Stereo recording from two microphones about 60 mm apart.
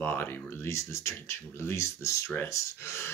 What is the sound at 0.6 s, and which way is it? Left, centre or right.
Speech, left.